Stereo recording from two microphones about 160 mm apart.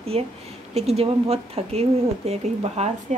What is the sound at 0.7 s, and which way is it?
A woman's voice, 40° right (ahead or behind).